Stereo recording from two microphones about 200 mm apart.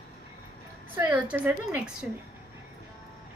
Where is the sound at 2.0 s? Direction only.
5° right (ahead or behind).